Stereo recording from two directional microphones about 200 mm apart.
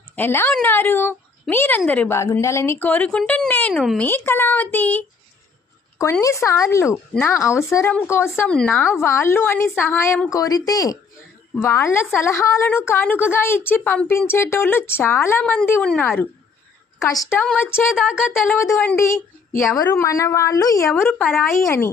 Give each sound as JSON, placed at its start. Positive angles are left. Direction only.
{"t": 0.2, "sound": "a woman's voice", "side_deg": 10}
{"t": 17.9, "sound": "a sound", "side_deg": -5}
{"t": 18.5, "sound": "a woman's voice", "side_deg": 10}